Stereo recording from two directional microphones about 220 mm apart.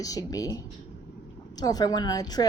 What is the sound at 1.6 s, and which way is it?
Speech, 15° left (ahead or behind).